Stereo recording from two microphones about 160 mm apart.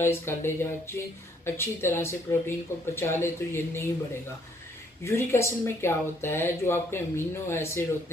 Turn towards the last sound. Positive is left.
turn(degrees=15)  # may be behind; listen again after turning